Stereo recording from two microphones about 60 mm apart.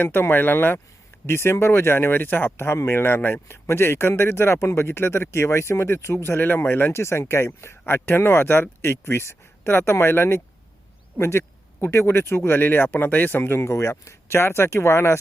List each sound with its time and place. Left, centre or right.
0.0 s speech: left
6.9 s speech: left
12.5 s speech: left